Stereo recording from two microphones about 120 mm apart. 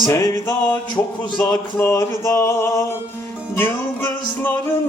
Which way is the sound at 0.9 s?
30° left (ahead or behind).